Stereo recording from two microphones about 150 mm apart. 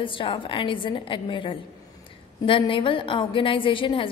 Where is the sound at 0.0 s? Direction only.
35° left (ahead or behind).